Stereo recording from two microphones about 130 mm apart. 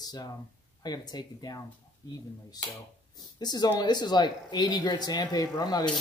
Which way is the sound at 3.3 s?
30° left (ahead or behind).